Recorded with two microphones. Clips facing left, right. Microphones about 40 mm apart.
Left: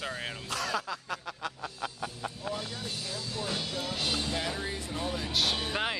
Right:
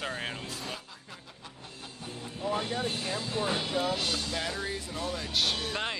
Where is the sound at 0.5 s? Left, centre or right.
Left.